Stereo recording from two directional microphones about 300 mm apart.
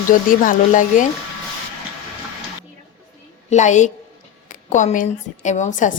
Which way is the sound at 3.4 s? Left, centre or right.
Left.